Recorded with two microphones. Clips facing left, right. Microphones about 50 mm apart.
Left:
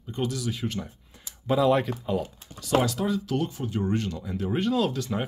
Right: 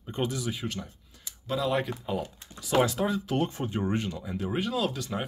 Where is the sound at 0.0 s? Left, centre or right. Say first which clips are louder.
Left 1 dB; right.